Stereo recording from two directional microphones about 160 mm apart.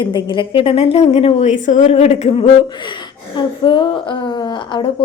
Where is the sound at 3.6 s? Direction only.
30° left (ahead or behind).